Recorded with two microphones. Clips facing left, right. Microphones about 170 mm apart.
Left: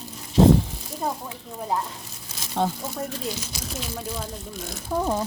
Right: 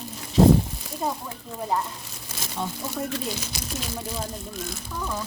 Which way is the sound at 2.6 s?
90° left.